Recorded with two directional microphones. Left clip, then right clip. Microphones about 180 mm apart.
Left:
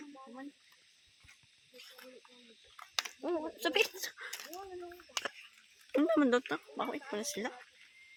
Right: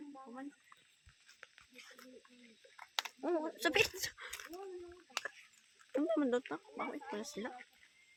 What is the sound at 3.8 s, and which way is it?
Speech, 15° left (ahead or behind).